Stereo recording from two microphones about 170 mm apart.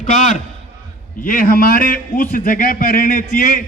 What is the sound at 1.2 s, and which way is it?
A man's voice, 55° left (ahead or behind).